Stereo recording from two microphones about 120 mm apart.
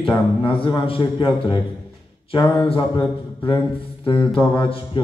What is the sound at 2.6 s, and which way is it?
Speech, 50° left (ahead or behind).